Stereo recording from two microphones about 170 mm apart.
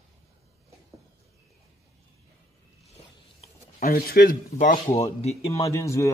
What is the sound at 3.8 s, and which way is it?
Speech, 60° left (ahead or behind).